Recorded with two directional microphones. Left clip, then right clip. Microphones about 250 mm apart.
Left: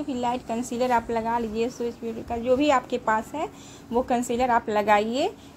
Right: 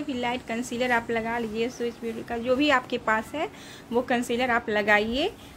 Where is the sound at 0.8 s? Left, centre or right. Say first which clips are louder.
Left 2 dB; centre.